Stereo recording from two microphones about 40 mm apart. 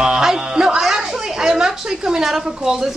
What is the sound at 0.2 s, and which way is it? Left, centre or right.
Music, centre.